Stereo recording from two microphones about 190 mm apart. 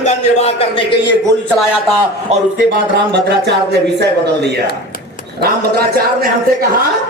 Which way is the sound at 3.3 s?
60° right (ahead or behind).